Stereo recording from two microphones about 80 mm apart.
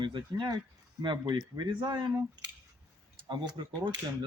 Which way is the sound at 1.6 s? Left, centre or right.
Right.